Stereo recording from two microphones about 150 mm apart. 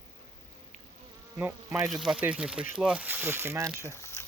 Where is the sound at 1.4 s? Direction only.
20° right (ahead or behind).